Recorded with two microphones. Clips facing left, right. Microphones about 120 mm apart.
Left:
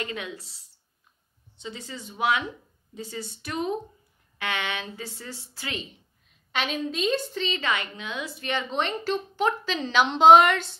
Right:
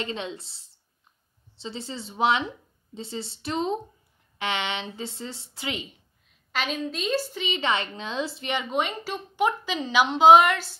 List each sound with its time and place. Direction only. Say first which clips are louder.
0.0 s speech: right 2 dB; 25° right (ahead or behind)
6.5 s a woman's voice: left 1 dB; centre (ahead or behind)
7.7 s a woman's voice: right 3 dB; 30° right (ahead or behind); by 10.7 s 5° right (ahead or behind)